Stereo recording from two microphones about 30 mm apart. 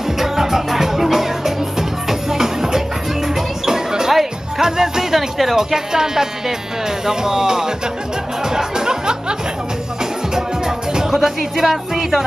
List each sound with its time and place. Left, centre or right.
0.2 s music: centre
5.1 s music: centre
5.6 s speech: centre
8.5 s music: right
11.1 s speech: centre